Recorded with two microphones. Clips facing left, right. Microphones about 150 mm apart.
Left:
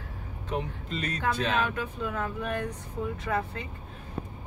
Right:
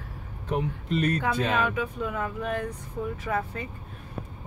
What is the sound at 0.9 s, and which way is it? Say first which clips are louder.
Speech: right 5 dB; 55° right (ahead or behind).